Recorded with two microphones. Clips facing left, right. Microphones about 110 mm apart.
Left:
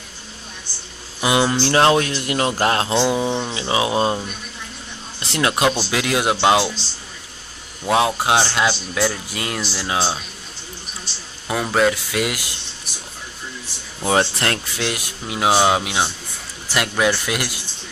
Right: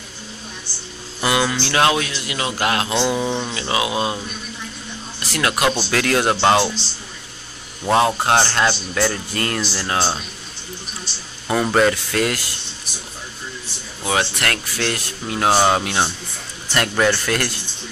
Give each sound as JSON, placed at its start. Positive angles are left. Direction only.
{"t": 1.2, "sound": "speech", "side_deg": 20}
{"t": 1.5, "sound": "speech", "side_deg": 40}
{"t": 3.3, "sound": "speech", "side_deg": 5}
{"t": 3.5, "sound": "speech", "side_deg": 25}
{"t": 5.2, "sound": "speech", "side_deg": 25}
{"t": 5.7, "sound": "speech", "side_deg": 10}
{"t": 7.8, "sound": "speech", "side_deg": 5}
{"t": 11.4, "sound": "speech", "side_deg": 0}
{"t": 14.0, "sound": "speech", "side_deg": 35}
{"t": 14.8, "sound": "speech", "side_deg": 15}